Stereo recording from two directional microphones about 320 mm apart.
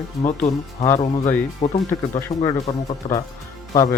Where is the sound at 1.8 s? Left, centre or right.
Centre.